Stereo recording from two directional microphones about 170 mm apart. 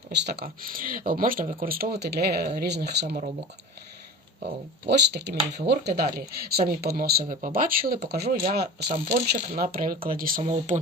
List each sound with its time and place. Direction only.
0.1 s speech: 80° right
4.9 s speech: 80° right; by 10.4 s 55° right (ahead or behind)
10.4 s speech: 45° right (ahead or behind)